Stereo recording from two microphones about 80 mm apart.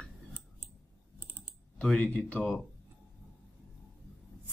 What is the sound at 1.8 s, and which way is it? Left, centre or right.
Speech, centre.